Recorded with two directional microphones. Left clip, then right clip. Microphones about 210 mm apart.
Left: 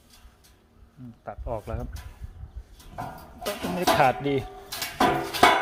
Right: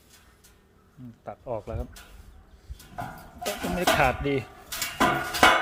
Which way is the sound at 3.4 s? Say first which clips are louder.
Even; centre (ahead or behind).